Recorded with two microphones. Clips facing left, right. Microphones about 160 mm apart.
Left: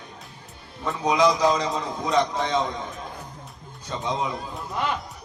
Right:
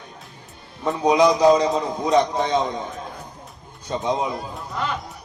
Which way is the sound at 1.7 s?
20° right (ahead or behind).